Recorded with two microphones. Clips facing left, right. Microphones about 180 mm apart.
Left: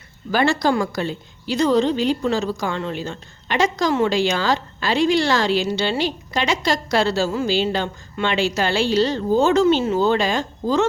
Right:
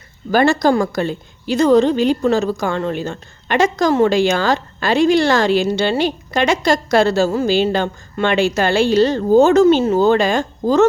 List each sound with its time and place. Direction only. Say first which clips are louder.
0.3 s a woman's voice: right 5 dB; 45° right (ahead or behind)